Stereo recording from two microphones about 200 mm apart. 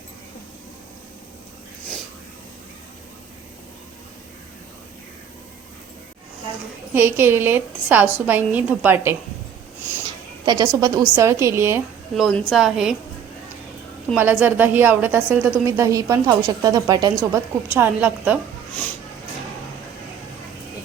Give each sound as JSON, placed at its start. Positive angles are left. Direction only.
{"t": 6.9, "sound": "a woman's voice", "side_deg": -10}
{"t": 10.4, "sound": "a woman's voice", "side_deg": -20}
{"t": 12.1, "sound": "a woman's voice", "side_deg": 0}
{"t": 14.2, "sound": "a woman's voice", "side_deg": -10}